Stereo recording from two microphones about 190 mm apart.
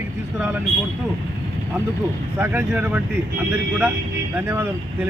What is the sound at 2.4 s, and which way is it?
Speech, 5° right (ahead or behind).